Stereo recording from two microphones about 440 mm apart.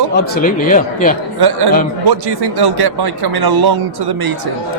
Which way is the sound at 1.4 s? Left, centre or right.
Right.